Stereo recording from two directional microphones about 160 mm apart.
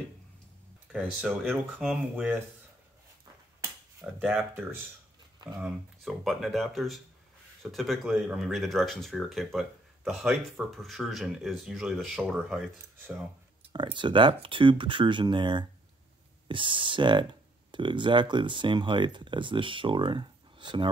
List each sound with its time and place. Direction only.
0.9 s speech: 10° right (ahead or behind)
4.0 s speech: 5° right (ahead or behind)
5.6 s speech: centre (ahead or behind)
13.7 s speech: 30° right (ahead or behind)